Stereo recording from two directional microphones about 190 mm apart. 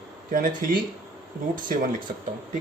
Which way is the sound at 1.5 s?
45° right (ahead or behind).